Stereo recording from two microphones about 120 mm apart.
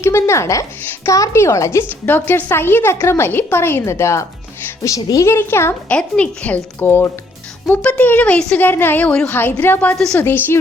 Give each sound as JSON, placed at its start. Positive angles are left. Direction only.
{"t": 0.0, "sound": "a woman's voice", "side_deg": 25}
{"t": 5.9, "sound": "a woman's voice", "side_deg": 10}